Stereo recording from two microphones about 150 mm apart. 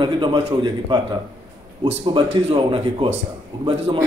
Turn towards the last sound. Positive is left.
turn(degrees=-30)  # may be behind; listen again after turning